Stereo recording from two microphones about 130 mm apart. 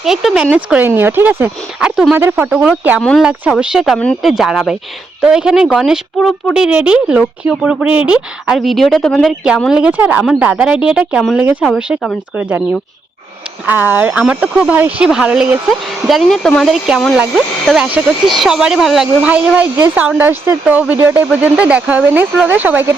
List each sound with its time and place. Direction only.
0.0 s speech: centre (ahead or behind)
3.9 s speech: 10° left (ahead or behind)
9.0 s speech: 10° left (ahead or behind)
9.2 s speech: 5° right (ahead or behind)
12.4 s speech: 10° right (ahead or behind)
13.7 s speech: 15° right (ahead or behind)
19.8 s speech: 15° right (ahead or behind)